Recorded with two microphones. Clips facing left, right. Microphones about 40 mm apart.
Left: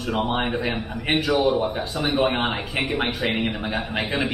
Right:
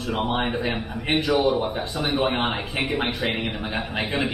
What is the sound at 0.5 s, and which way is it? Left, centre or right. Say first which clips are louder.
Speech: left 1 dB; centre.